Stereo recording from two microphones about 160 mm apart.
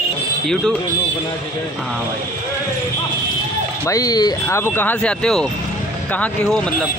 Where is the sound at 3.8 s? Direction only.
20° left (ahead or behind).